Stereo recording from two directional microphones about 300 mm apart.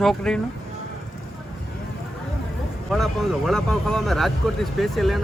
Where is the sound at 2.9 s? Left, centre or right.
Centre.